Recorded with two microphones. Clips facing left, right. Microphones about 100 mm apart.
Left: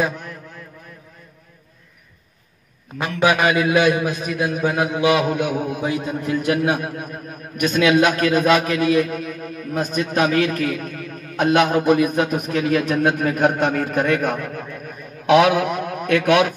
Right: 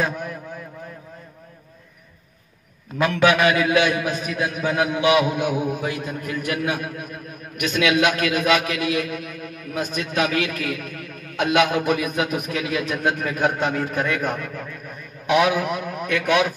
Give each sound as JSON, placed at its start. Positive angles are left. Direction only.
{"t": 3.0, "sound": "a man's voice", "side_deg": 20}
{"t": 5.8, "sound": "a man's voice", "side_deg": 20}